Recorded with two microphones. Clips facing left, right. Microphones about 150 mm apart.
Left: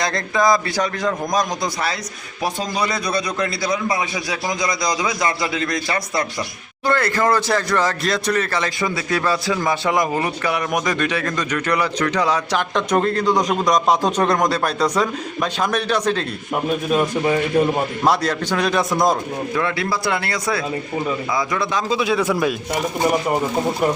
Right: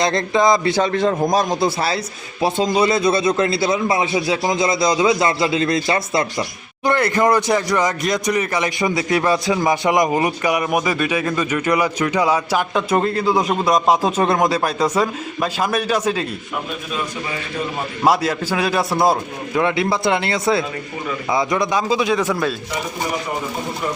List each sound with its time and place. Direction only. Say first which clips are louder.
0.0 s a man's voice: right 3 dB; 25° right (ahead or behind); by 16.2 s 10° right (ahead or behind)
16.9 s a man's voice: left 8 dB; 50° left (ahead or behind)
18.0 s speech: right 4 dB; 10° right (ahead or behind)
19.5 s a man's voice: right 5 dB; 20° right (ahead or behind)
21.8 s a man's voice: right 1 dB; centre (ahead or behind)